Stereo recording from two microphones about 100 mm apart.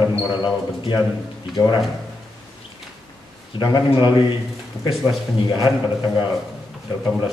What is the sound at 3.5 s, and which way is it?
Speech, 50° left (ahead or behind).